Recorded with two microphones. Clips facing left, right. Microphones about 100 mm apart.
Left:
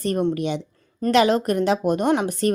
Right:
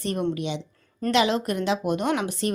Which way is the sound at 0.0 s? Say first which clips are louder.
Left 4 dB; 45° left (ahead or behind).